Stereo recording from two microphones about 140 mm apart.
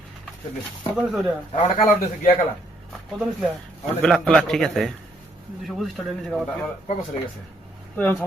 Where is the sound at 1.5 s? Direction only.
45° left (ahead or behind).